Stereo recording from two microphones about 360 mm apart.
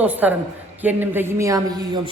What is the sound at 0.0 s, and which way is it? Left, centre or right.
A man's voice, centre.